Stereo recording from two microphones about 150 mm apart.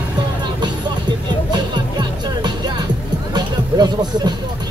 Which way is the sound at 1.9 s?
30° right (ahead or behind).